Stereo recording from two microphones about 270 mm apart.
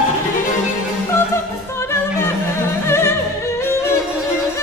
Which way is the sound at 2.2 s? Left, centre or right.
Centre.